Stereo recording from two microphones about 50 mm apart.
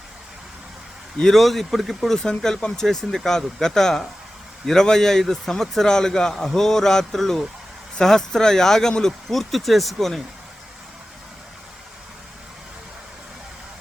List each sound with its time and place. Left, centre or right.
1.2 s speech: centre
2.1 s a man's voice: centre